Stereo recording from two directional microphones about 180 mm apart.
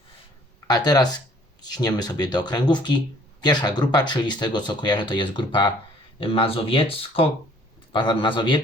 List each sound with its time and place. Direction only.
0.7 s speech: 20° left (ahead or behind)